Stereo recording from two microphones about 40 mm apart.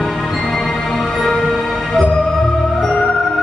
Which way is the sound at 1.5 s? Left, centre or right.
Centre.